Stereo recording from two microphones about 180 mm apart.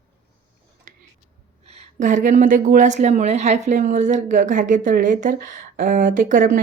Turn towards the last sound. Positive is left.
turn(degrees=-45)  # may be behind; listen again after turning